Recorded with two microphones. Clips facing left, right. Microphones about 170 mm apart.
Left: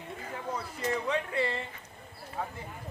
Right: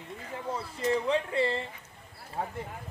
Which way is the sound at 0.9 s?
30° right (ahead or behind).